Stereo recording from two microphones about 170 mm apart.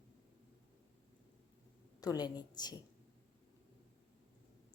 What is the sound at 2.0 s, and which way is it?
Speech, 25° left (ahead or behind).